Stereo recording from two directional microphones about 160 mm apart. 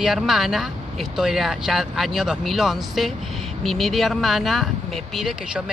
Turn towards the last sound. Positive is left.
turn(degrees=0)  # may be behind; listen again after turning